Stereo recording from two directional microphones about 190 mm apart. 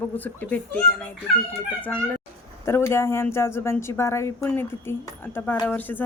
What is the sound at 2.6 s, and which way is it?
Speech, 15° left (ahead or behind).